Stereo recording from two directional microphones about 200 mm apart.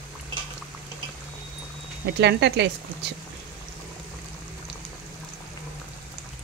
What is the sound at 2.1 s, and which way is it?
Speech, 55° right (ahead or behind).